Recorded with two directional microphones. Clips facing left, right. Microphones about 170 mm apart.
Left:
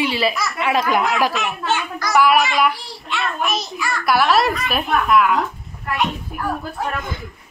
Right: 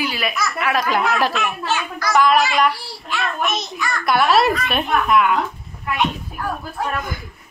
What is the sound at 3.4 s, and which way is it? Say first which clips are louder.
Speech: even; 30° left (ahead or behind).